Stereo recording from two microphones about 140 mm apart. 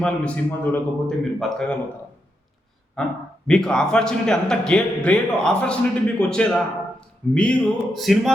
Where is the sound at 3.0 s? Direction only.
5° left (ahead or behind).